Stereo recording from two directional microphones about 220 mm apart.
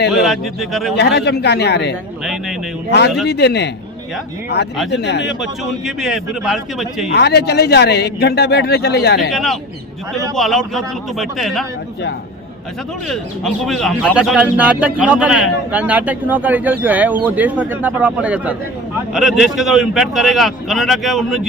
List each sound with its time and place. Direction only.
0.1 s a man's voice: centre (ahead or behind)
0.9 s speech: 50° left (ahead or behind)
2.2 s a man's voice: centre (ahead or behind)
3.2 s speech: 50° left (ahead or behind)
5.4 s a man's voice: centre (ahead or behind)
7.1 s speech: 50° left (ahead or behind)
9.3 s a man's voice: centre (ahead or behind)
13.1 s a man's voice: centre (ahead or behind)